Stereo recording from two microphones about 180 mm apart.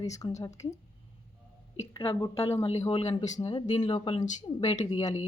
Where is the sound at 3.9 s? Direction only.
30° left (ahead or behind).